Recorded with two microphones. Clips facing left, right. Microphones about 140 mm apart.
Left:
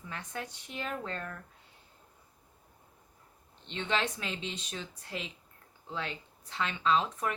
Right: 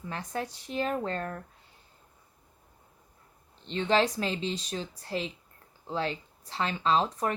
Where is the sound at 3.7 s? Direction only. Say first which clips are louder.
Right 7 dB; 35° right (ahead or behind).